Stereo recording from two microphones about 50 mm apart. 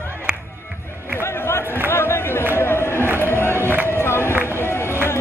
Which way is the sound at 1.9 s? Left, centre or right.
Left.